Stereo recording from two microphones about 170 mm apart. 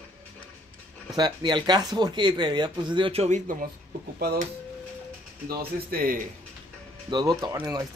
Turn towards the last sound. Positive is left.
turn(degrees=-20)  # may be behind; listen again after turning